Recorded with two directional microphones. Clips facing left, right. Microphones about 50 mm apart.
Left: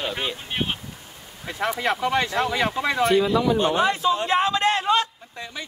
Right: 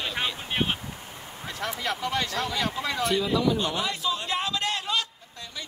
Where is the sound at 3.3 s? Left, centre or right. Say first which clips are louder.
Left 5 dB; left.